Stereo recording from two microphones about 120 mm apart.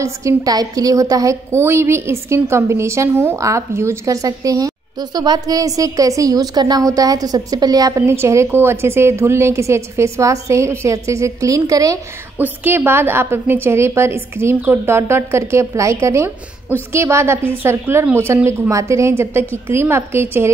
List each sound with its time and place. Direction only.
0.0 s a woman's voice: 25° right (ahead or behind)
12.4 s a woman's voice: 20° right (ahead or behind)